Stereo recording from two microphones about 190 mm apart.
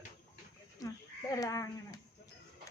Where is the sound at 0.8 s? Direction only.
20° left (ahead or behind).